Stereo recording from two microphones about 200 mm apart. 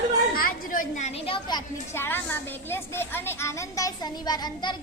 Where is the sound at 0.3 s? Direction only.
45° left (ahead or behind).